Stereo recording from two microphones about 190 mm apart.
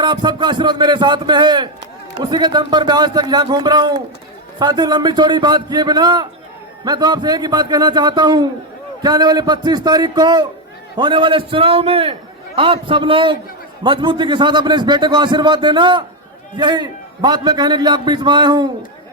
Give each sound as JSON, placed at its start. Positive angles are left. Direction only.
{"t": 0.0, "sound": "a man's voice", "side_deg": -25}